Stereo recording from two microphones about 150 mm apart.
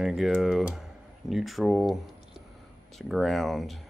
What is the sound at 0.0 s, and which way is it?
Speech, centre (ahead or behind).